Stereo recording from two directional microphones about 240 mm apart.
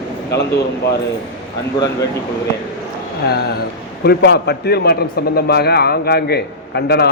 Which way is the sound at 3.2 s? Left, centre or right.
Left.